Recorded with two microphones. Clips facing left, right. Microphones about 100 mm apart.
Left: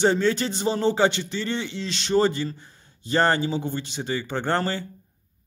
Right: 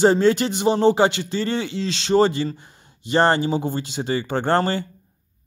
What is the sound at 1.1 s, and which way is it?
Speech, 90° right.